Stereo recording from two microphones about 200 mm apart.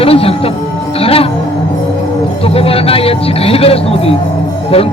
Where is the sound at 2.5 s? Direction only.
30° left (ahead or behind).